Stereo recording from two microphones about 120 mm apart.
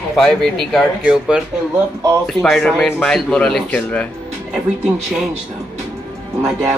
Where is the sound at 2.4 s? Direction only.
Centre (ahead or behind).